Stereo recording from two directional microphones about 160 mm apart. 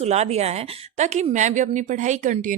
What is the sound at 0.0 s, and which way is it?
Speech, 40° right (ahead or behind).